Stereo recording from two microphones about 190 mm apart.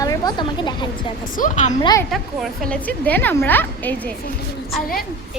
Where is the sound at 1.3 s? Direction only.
40° left (ahead or behind).